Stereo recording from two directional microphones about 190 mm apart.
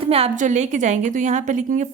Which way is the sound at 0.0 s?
30° right (ahead or behind).